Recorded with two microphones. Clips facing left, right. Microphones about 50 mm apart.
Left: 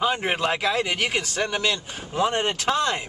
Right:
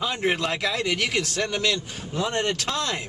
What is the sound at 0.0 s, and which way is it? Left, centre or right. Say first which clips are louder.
A man's voice: left 2 dB; centre.